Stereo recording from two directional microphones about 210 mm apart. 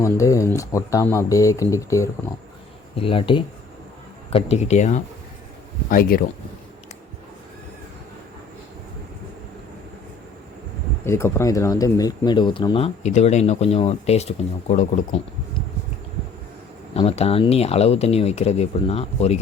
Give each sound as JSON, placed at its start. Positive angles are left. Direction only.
{"t": 0.0, "sound": "speech", "side_deg": 15}
{"t": 2.9, "sound": "speech", "side_deg": 25}
{"t": 11.0, "sound": "speech", "side_deg": 10}
{"t": 16.9, "sound": "speech", "side_deg": 30}